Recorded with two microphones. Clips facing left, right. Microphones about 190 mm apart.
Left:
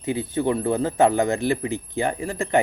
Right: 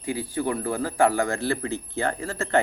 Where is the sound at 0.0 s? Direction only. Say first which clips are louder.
Left 4 dB; 25° left (ahead or behind).